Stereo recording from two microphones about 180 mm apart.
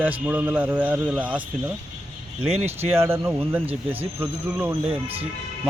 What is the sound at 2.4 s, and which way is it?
Speech, 35° right (ahead or behind).